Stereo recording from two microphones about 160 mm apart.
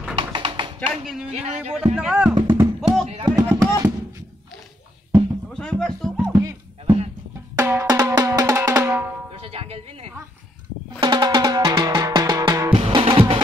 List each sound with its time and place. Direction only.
0.2 s music: 30° right (ahead or behind)
1.3 s speech: 45° right (ahead or behind)
2.0 s speech: 5° right (ahead or behind)
2.5 s music: 15° right (ahead or behind)
3.3 s speech: 25° right (ahead or behind)
5.5 s speech: 5° left (ahead or behind)
6.3 s music: 25° right (ahead or behind)
7.5 s drum: 15° right (ahead or behind)
9.3 s speech: 40° right (ahead or behind)
11.0 s music: 25° right (ahead or behind)
12.7 s music: 35° right (ahead or behind)